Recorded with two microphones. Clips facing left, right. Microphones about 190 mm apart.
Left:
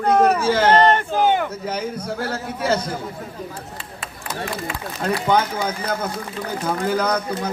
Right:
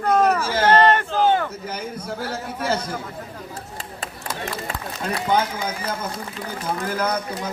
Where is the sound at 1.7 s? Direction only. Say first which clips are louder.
Left 4 dB; 50° left (ahead or behind).